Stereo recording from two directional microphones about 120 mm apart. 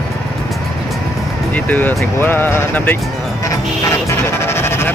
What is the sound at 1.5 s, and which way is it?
Speech, 15° left (ahead or behind).